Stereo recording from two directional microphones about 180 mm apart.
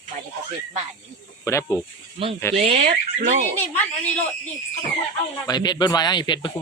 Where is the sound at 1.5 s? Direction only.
15° left (ahead or behind).